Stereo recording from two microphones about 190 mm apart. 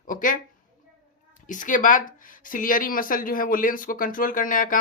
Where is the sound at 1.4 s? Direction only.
45° left (ahead or behind).